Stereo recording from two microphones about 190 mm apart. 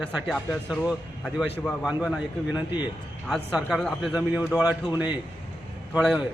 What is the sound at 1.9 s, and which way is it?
A man's voice, 5° right (ahead or behind).